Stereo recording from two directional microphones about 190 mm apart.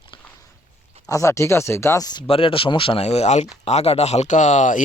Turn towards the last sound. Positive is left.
turn(degrees=40)  # may be behind; listen again after turning